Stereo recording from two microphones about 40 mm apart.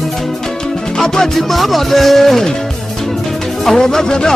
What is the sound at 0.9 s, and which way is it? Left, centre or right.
Music, centre.